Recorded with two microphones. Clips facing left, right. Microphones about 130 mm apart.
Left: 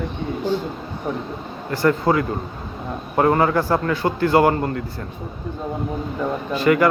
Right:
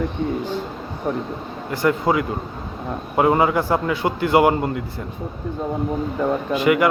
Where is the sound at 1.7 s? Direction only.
15° right (ahead or behind).